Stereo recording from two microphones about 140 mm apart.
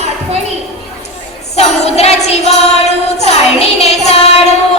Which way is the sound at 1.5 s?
50° left (ahead or behind).